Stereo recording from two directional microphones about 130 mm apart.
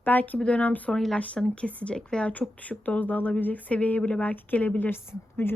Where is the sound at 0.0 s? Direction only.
15° left (ahead or behind).